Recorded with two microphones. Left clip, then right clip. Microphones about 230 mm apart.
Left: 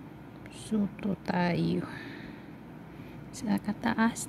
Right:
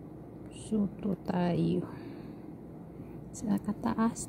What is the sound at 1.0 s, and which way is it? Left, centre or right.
Speech, centre.